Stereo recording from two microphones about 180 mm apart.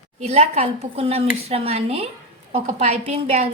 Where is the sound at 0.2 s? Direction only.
35° right (ahead or behind).